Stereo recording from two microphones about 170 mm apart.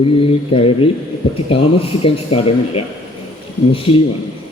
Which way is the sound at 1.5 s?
35° left (ahead or behind).